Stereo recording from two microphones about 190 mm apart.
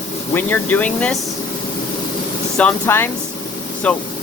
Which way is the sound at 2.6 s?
10° left (ahead or behind).